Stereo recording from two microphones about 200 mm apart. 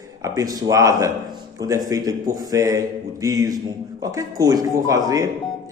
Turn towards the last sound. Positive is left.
turn(degrees=-15)  # may be behind; listen again after turning